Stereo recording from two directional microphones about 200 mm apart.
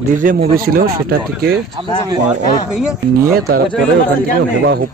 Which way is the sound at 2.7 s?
5° right (ahead or behind).